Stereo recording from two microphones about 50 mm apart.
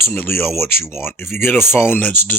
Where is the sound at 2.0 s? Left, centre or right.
Left.